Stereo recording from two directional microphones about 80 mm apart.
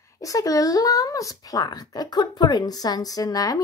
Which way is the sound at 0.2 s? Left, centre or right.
Left.